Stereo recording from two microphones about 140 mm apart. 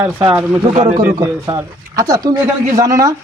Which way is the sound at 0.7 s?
60° right (ahead or behind).